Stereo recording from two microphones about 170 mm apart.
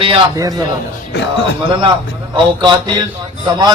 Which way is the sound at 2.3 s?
25° right (ahead or behind).